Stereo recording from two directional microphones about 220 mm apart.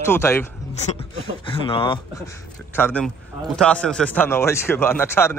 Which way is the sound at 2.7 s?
10° left (ahead or behind).